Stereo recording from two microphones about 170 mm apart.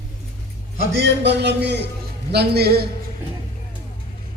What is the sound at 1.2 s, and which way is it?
Speech, 90° right.